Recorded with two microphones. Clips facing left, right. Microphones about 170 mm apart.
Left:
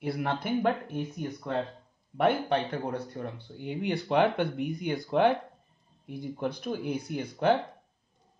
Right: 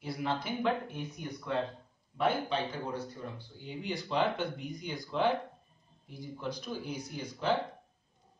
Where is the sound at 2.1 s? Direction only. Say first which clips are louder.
Left 5 dB; 60° left (ahead or behind).